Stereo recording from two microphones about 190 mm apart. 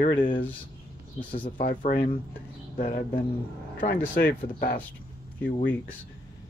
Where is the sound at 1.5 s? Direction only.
45° left (ahead or behind).